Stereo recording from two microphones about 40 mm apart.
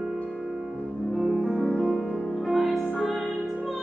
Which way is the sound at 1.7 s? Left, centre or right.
Centre.